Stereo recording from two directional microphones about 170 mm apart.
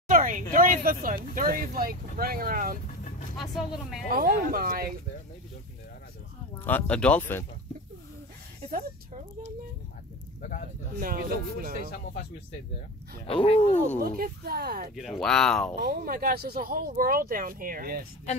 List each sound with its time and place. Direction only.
0.1 s speech: 50° right (ahead or behind)
3.5 s speech: centre (ahead or behind)
4.1 s speech: 60° right (ahead or behind)
6.6 s speech: 10° left (ahead or behind)
10.9 s speech: 55° right (ahead or behind)
13.3 s speech: 35° left (ahead or behind)
13.9 s speech: 60° right (ahead or behind)
15.0 s speech: centre (ahead or behind)
15.7 s speech: 60° right (ahead or behind)